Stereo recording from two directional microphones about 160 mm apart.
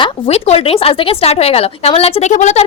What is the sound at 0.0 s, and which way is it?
Speech, 40° left (ahead or behind).